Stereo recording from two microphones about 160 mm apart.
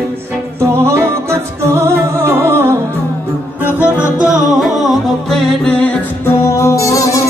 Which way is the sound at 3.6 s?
10° right (ahead or behind).